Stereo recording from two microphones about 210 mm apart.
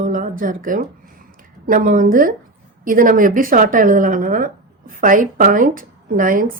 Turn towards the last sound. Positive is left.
turn(degrees=-40)  # may be behind; listen again after turning